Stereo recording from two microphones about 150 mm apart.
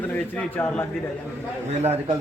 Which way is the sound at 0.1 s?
10° left (ahead or behind).